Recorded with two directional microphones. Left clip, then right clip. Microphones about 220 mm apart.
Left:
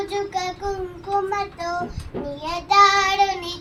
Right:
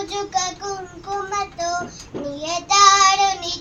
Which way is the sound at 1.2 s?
15° right (ahead or behind).